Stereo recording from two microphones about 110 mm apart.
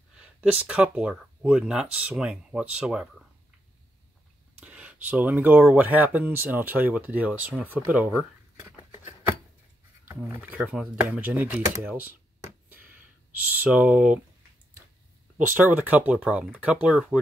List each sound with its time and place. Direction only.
0.2 s speech: 10° right (ahead or behind)
4.6 s speech: 10° right (ahead or behind)
10.0 s speech: 15° right (ahead or behind)
13.5 s speech: 15° right (ahead or behind)
15.3 s speech: 15° right (ahead or behind)